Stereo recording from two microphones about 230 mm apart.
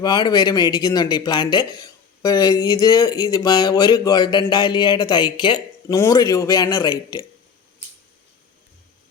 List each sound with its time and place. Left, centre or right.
0.0 s speech: centre